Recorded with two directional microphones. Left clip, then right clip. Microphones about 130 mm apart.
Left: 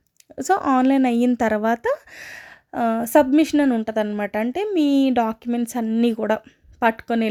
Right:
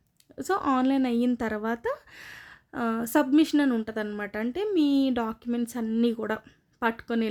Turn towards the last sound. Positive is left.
turn(degrees=35)  # may be behind; listen again after turning